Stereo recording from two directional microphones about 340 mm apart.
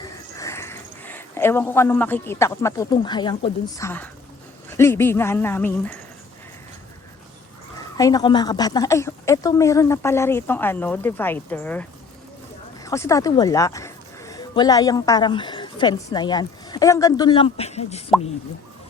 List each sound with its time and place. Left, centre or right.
0.0 s a woman's voice: centre
7.9 s a woman's voice: centre